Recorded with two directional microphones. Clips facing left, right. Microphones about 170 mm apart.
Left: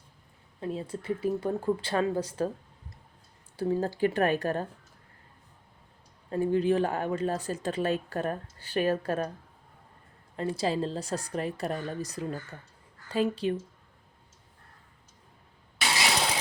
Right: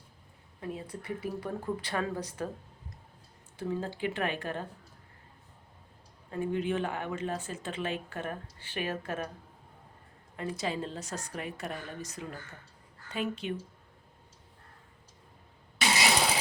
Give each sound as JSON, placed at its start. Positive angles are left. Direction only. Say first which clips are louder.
{"t": 0.6, "sound": "speech", "louder": "left 5 dB", "side_deg": 25}
{"t": 3.6, "sound": "speech", "louder": "left 7 dB", "side_deg": 40}
{"t": 6.3, "sound": "speech", "louder": "left 6 dB", "side_deg": 35}
{"t": 10.3, "sound": "a woman's voice", "louder": "left 5 dB", "side_deg": 30}